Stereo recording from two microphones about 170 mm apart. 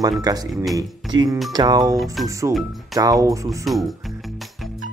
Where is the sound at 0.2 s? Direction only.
20° right (ahead or behind).